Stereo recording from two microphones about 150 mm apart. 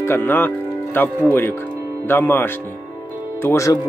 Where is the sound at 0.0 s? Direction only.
15° left (ahead or behind).